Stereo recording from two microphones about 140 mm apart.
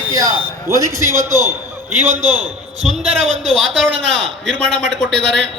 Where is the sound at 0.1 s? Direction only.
25° right (ahead or behind).